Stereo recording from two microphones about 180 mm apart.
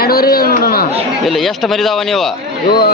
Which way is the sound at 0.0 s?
55° left (ahead or behind).